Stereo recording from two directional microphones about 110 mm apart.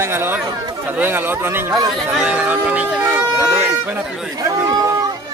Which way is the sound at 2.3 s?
10° right (ahead or behind).